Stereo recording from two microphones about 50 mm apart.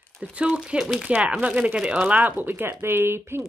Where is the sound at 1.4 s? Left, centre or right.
Right.